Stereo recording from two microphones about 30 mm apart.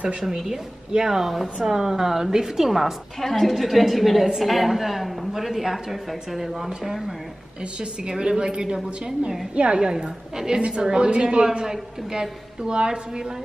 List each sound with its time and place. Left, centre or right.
0.9 s speech: centre
1.6 s speech: centre
3.2 s a woman's voice: centre
7.8 s a woman's voice: right
11.6 s a woman's voice: centre